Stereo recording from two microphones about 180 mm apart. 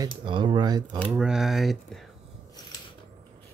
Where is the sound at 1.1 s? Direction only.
5° right (ahead or behind).